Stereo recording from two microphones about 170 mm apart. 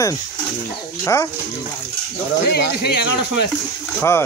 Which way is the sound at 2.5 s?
80° left.